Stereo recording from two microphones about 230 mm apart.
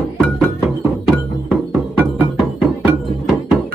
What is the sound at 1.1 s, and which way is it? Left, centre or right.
Music, centre.